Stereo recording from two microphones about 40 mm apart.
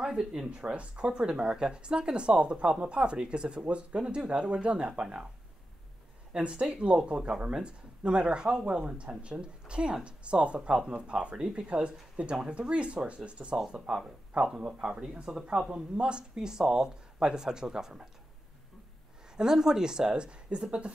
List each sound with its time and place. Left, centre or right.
0.0 s speech: centre
0.5 s speech: right
6.3 s speech: right
19.3 s speech: centre